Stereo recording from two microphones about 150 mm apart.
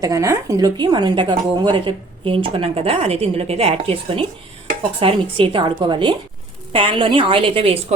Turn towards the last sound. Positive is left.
turn(degrees=-35)  # may be behind; listen again after turning